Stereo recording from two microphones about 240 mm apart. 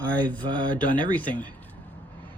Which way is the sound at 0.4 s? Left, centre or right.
Centre.